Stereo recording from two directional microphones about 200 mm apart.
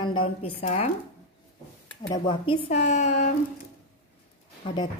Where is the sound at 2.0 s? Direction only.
25° left (ahead or behind).